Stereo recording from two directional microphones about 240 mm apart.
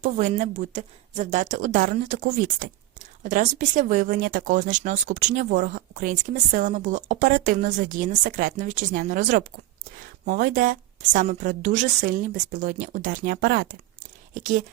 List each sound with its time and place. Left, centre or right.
0.0 s speech: right